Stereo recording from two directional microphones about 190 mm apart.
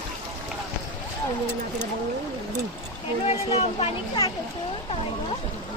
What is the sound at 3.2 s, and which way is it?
Speech, 30° left (ahead or behind).